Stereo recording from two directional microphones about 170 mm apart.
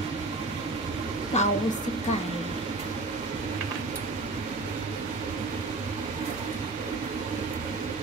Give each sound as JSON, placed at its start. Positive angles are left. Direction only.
{"t": 1.3, "sound": "a woman's voice", "side_deg": 40}